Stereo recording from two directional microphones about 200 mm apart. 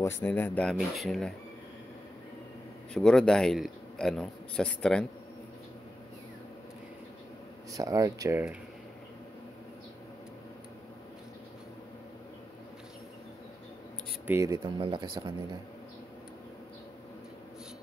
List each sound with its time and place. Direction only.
0.0 s a man's voice: 10° left (ahead or behind)
2.9 s a man's voice: 5° left (ahead or behind)
7.7 s speech: 15° right (ahead or behind)
14.2 s speech: 15° right (ahead or behind)